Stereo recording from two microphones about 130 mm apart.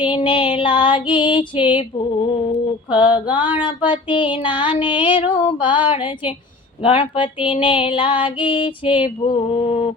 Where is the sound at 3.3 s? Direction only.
15° right (ahead or behind).